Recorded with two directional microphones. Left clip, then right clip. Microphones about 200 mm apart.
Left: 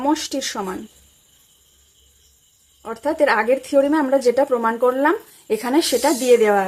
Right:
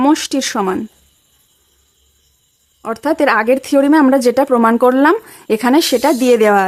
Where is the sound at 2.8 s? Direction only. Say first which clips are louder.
Right 4 dB; 40° right (ahead or behind).